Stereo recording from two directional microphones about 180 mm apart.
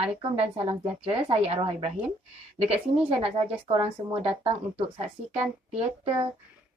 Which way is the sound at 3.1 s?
30° right (ahead or behind).